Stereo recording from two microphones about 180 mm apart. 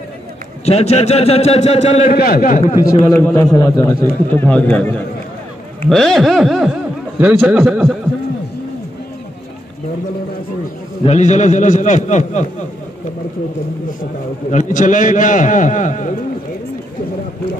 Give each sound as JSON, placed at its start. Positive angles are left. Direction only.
{"t": 0.7, "sound": "a man's voice", "side_deg": 35}
{"t": 2.1, "sound": "a man's voice", "side_deg": 55}
{"t": 2.8, "sound": "speech", "side_deg": 10}
{"t": 5.9, "sound": "a man's voice", "side_deg": 0}
{"t": 11.1, "sound": "a man's voice", "side_deg": 40}
{"t": 14.5, "sound": "a man's voice", "side_deg": 45}